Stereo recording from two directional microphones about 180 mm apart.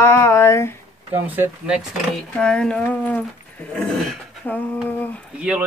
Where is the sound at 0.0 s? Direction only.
15° left (ahead or behind).